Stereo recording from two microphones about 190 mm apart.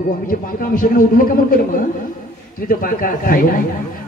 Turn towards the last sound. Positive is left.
turn(degrees=50)  # may be behind; listen again after turning